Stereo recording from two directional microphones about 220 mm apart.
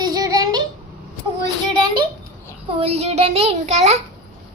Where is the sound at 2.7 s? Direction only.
25° right (ahead or behind).